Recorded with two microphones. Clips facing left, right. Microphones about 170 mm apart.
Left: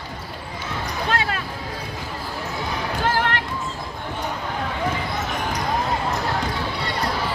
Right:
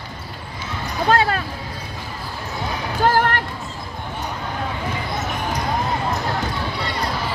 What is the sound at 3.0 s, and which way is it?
Music, 45° right (ahead or behind).